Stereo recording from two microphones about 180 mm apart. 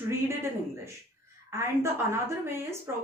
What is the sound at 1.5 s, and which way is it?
Speech, 15° right (ahead or behind).